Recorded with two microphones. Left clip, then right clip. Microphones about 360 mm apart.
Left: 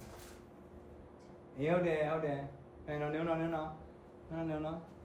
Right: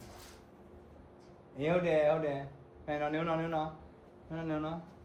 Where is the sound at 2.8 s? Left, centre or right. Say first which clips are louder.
Right 3 dB; right.